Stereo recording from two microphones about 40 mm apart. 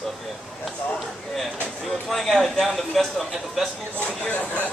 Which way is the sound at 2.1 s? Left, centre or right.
Centre.